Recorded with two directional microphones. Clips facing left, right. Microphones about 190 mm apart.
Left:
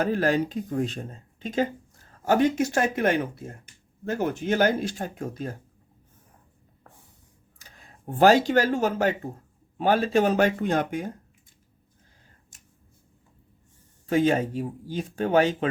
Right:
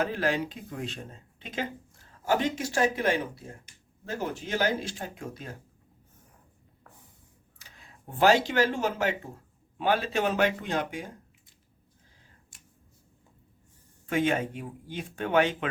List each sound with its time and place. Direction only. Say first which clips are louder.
0.0 s speech: left 5 dB; 45° left (ahead or behind)
7.6 s speech: left 7 dB; 45° left (ahead or behind)
14.1 s speech: left 5 dB; 35° left (ahead or behind)